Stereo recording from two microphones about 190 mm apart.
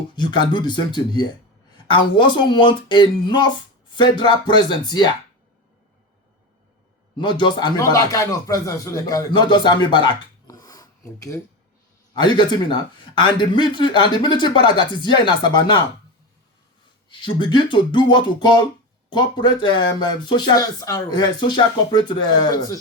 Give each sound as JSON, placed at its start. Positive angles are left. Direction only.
{"t": 0.3, "sound": "speech", "side_deg": 25}
{"t": 7.2, "sound": "a man's voice", "side_deg": 25}
{"t": 17.1, "sound": "speech", "side_deg": 25}